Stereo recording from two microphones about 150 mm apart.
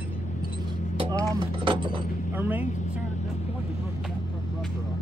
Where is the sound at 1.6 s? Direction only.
35° right (ahead or behind).